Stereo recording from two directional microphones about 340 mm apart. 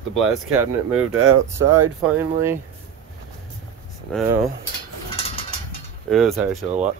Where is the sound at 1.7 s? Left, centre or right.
Centre.